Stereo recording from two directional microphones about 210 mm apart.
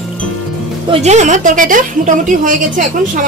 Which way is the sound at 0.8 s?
35° right (ahead or behind).